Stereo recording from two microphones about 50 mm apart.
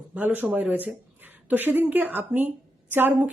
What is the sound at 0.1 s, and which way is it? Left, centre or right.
Speech, right.